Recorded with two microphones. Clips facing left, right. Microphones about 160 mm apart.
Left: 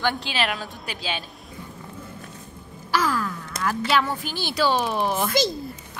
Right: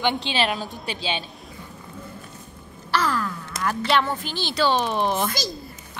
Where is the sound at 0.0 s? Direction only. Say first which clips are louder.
Right 2 dB; 25° right (ahead or behind).